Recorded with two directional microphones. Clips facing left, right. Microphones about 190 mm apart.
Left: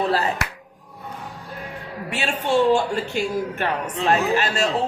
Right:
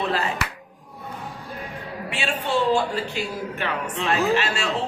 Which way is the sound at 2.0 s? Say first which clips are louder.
Left 2 dB; 45° left (ahead or behind).